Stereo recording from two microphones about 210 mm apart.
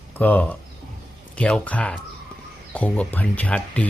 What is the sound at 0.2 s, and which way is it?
Speech, 10° left (ahead or behind).